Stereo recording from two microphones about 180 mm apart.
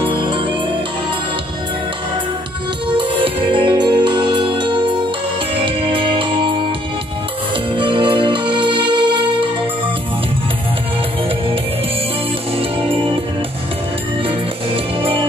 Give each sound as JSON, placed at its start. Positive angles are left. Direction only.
{"t": 0.0, "sound": "music", "side_deg": -30}
{"t": 3.0, "sound": "music", "side_deg": -30}
{"t": 7.7, "sound": "music", "side_deg": -25}
{"t": 15.0, "sound": "music", "side_deg": -30}